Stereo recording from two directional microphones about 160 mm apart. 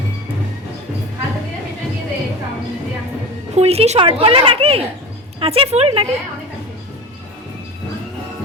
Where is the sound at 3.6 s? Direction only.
40° right (ahead or behind).